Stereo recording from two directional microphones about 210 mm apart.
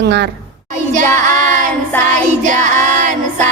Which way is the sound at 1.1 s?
10° left (ahead or behind).